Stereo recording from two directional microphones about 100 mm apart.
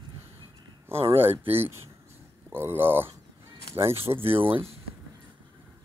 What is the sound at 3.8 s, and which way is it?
Speech, 70° right (ahead or behind).